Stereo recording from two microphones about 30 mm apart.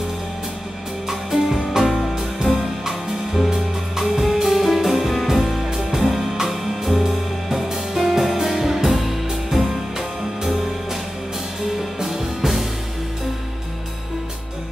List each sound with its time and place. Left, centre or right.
1.0 s music: centre
3.4 s music: centre
12.0 s music: centre